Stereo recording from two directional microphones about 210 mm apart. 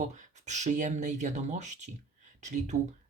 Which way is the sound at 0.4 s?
35° right (ahead or behind).